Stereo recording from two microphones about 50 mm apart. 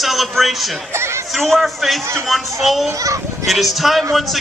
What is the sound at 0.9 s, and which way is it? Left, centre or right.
Speech, right.